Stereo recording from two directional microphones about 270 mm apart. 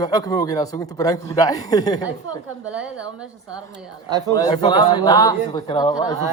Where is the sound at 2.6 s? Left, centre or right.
Centre.